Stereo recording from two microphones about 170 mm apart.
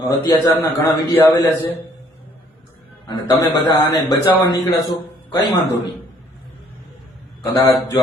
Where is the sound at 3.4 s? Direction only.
20° left (ahead or behind).